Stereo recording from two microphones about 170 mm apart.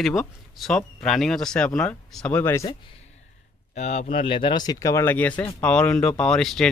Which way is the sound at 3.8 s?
40° left (ahead or behind).